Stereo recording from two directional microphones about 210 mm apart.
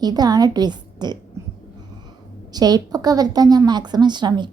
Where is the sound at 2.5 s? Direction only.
20° right (ahead or behind).